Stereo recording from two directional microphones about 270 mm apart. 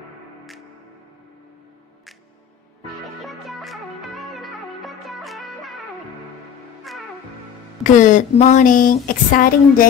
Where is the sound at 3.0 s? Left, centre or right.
Centre.